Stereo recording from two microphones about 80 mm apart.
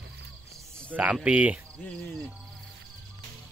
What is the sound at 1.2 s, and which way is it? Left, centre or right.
Speech, centre.